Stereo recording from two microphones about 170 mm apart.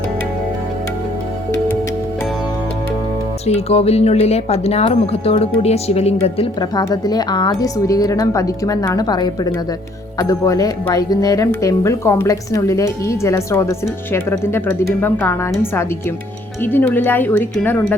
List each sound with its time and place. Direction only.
3.4 s speech: 40° left (ahead or behind)
6.7 s speech: 20° left (ahead or behind)